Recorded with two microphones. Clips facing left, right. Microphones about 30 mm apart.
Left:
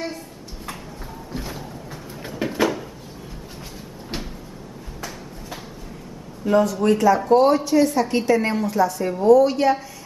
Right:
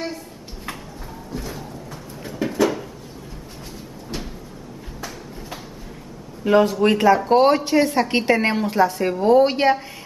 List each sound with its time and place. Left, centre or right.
1.3 s speech: centre
2.4 s a sound: left
6.4 s a woman's voice: right